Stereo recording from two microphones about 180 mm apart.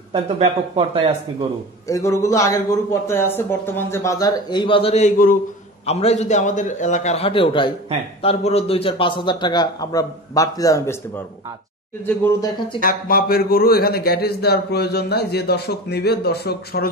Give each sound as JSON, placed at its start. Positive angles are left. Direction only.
{"t": 0.1, "sound": "speech", "side_deg": -30}
{"t": 1.9, "sound": "a man's voice", "side_deg": 15}
{"t": 12.2, "sound": "a man's voice", "side_deg": 20}
{"t": 12.8, "sound": "a man's voice", "side_deg": 55}